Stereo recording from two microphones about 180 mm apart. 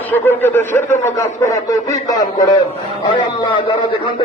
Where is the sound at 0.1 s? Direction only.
10° left (ahead or behind).